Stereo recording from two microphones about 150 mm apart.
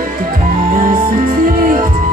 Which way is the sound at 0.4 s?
65° right (ahead or behind).